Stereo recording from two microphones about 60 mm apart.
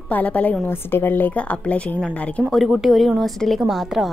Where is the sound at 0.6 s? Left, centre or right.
Left.